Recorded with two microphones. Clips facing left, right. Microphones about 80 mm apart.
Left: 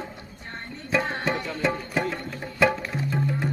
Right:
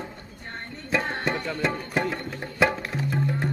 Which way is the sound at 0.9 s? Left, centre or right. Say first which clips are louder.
Left 1 dB; centre.